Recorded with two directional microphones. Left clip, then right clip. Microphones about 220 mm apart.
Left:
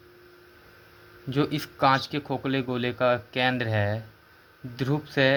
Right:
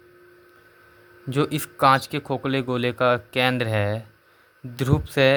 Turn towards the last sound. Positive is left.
turn(degrees=-30)  # may be behind; listen again after turning